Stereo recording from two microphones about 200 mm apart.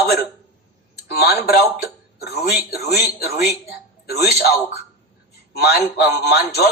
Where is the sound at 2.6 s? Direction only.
50° left (ahead or behind).